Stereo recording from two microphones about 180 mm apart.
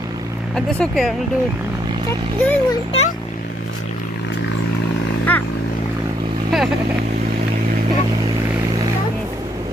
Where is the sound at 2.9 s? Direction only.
35° left (ahead or behind).